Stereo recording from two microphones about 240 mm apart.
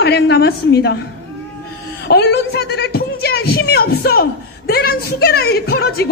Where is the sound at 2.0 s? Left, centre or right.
Left.